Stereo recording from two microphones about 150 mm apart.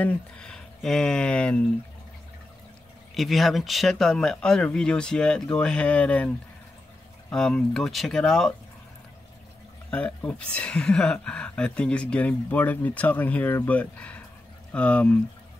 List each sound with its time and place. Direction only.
0.0 s speech: 5° left (ahead or behind)
3.2 s speech: centre (ahead or behind)
9.8 s speech: 10° left (ahead or behind)